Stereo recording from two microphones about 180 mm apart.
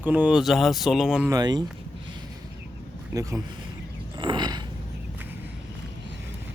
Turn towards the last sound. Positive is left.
turn(degrees=-25)  # may be behind; listen again after turning